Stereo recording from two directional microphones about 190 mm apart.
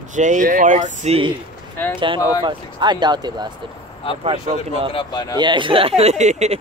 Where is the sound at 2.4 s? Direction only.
25° right (ahead or behind).